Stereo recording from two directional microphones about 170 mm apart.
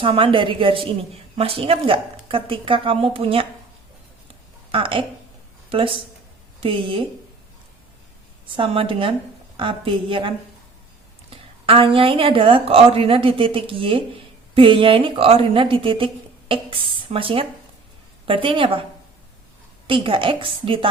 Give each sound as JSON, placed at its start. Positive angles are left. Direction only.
{"t": 0.0, "sound": "a woman's voice", "side_deg": -30}
{"t": 4.7, "sound": "a woman's voice", "side_deg": -30}
{"t": 8.5, "sound": "a woman's voice", "side_deg": -30}
{"t": 19.9, "sound": "a woman's voice", "side_deg": -30}